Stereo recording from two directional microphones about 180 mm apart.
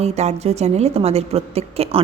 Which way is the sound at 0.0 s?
35° right (ahead or behind).